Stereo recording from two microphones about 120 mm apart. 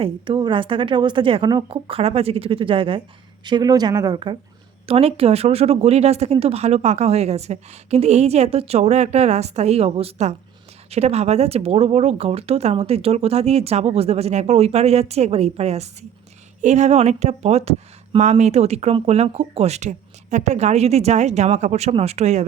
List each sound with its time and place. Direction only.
0.0 s a woman's voice: 45° right (ahead or behind)
3.4 s speech: 35° right (ahead or behind)
4.9 s speech: 55° right (ahead or behind)
16.6 s speech: 75° right (ahead or behind)